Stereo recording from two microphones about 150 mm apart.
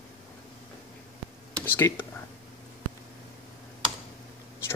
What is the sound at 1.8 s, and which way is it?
Speech, 15° left (ahead or behind).